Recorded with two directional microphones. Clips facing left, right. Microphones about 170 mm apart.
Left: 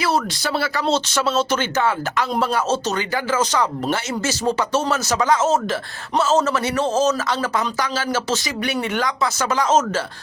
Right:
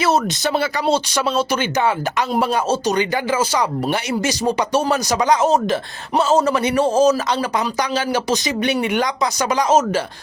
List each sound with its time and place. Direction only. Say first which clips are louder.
0.0 s speech: right 3 dB; 20° right (ahead or behind)